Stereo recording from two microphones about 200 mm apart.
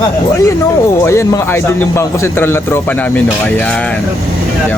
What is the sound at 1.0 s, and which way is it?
A man's voice, 15° left (ahead or behind).